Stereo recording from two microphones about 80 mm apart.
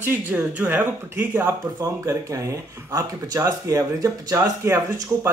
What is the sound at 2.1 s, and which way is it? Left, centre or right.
Speech, right.